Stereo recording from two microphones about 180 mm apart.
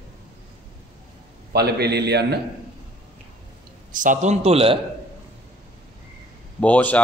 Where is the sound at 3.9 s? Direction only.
45° right (ahead or behind).